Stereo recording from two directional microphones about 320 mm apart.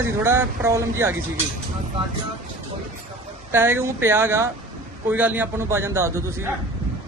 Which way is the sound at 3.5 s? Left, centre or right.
Centre.